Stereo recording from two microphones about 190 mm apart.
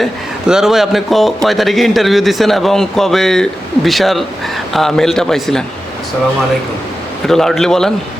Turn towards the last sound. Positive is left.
turn(degrees=5)  # may be behind; listen again after turning